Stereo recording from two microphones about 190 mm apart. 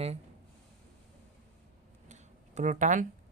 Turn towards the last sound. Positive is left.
turn(degrees=-40)  # may be behind; listen again after turning